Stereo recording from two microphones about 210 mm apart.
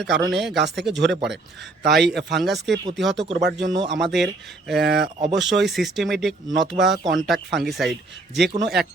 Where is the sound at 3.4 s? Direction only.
55° right (ahead or behind).